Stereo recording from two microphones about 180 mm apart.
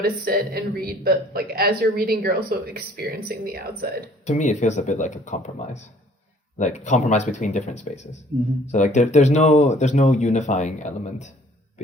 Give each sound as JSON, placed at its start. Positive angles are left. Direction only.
{"t": 0.0, "sound": "a woman's voice", "side_deg": -55}
{"t": 4.3, "sound": "speech", "side_deg": 40}